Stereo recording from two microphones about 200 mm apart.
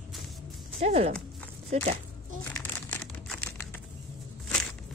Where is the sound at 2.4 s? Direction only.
10° left (ahead or behind).